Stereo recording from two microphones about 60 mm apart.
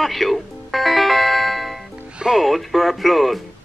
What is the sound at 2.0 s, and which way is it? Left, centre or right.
Music, centre.